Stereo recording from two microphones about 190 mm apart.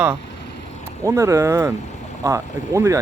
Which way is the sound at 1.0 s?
15° right (ahead or behind).